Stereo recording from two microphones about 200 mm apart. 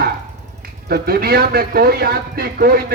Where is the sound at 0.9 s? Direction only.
50° right (ahead or behind).